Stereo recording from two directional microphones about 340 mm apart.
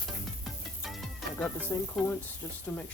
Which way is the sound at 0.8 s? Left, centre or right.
Centre.